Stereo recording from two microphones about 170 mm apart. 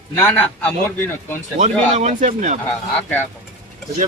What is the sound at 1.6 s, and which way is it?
Speech, 45° right (ahead or behind).